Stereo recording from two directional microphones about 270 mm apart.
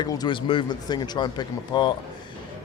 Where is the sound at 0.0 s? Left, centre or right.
Centre.